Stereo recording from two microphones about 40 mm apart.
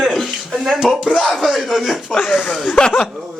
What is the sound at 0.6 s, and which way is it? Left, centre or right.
Speech, centre.